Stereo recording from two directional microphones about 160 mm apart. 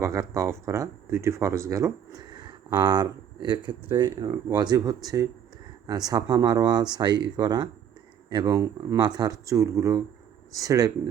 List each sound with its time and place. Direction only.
0.0 s speech: 20° right (ahead or behind)